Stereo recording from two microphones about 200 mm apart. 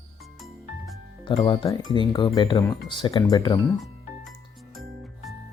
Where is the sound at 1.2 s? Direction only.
20° left (ahead or behind).